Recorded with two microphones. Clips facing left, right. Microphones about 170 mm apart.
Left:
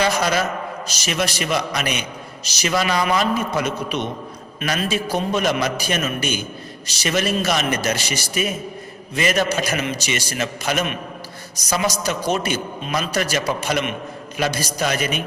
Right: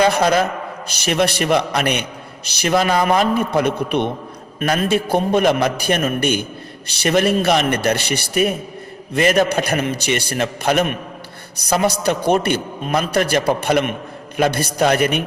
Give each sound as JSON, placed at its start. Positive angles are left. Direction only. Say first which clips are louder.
{"t": 0.0, "sound": "a man's voice", "louder": "right 5 dB", "side_deg": -55}